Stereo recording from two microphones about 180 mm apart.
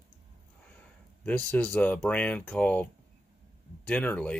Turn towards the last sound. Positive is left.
turn(degrees=10)  # may be behind; listen again after turning